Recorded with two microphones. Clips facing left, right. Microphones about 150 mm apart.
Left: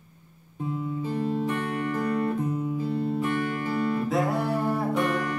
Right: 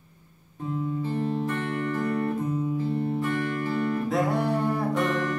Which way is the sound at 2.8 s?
20° right (ahead or behind).